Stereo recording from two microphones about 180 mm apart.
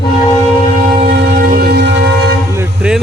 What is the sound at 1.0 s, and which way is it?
Train, 55° right (ahead or behind).